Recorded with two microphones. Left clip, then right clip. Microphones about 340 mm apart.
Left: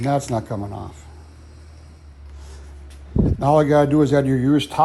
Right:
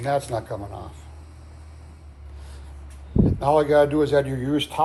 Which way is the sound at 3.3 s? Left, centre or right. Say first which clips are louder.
Left 2 dB; left.